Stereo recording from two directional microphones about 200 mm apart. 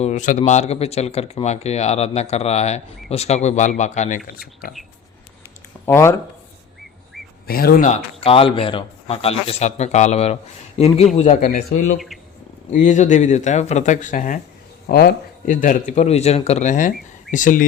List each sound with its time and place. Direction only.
0.0 s speech: 35° left (ahead or behind)
4.3 s speech: 50° left (ahead or behind)
5.8 s speech: 15° left (ahead or behind)
7.4 s speech: 50° left (ahead or behind)
7.9 s speech: 25° left (ahead or behind)
11.9 s speech: centre (ahead or behind)
12.7 s speech: 35° left (ahead or behind)
14.8 s speech: 50° left (ahead or behind)